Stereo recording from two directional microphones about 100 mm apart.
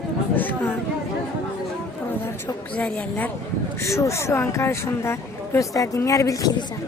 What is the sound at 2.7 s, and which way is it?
Speech, 10° left (ahead or behind).